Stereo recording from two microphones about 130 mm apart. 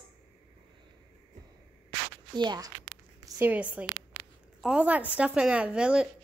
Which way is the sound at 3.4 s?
10° right (ahead or behind).